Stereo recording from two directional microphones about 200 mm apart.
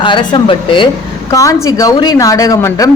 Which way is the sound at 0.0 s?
25° left (ahead or behind).